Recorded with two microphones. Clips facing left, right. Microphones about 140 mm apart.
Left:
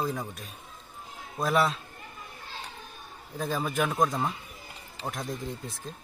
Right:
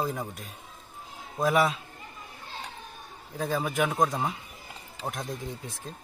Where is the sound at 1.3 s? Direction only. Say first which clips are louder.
Right 2 dB; 15° right (ahead or behind).